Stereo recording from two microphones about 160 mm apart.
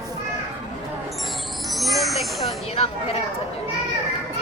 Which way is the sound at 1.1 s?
Centre (ahead or behind).